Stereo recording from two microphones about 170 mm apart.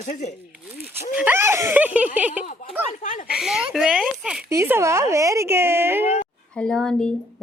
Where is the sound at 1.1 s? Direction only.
10° right (ahead or behind).